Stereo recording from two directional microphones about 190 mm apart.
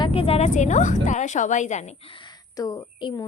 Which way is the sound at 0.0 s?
30° left (ahead or behind).